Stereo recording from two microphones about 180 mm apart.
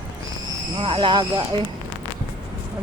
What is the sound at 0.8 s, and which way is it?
Speech, 30° right (ahead or behind).